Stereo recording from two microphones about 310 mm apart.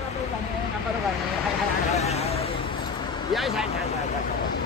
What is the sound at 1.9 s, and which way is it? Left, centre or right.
Vehicle, centre.